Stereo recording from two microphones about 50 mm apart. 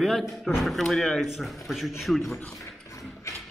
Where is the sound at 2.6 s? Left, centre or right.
Left.